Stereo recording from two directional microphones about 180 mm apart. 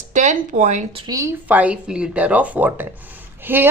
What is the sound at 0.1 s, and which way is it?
Speech, 40° right (ahead or behind).